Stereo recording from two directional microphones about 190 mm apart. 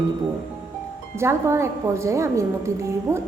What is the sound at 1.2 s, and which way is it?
Speech, 15° right (ahead or behind).